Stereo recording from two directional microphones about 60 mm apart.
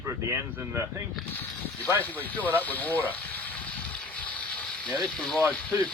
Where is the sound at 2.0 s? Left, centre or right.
Left.